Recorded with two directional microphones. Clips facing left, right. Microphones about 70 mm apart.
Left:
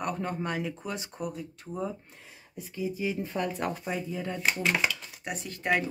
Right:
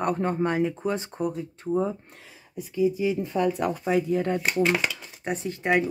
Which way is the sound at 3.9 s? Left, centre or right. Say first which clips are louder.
Right 10 dB; right.